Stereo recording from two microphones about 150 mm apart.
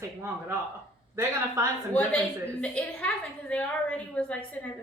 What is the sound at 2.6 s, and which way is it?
A woman's voice, 10° left (ahead or behind).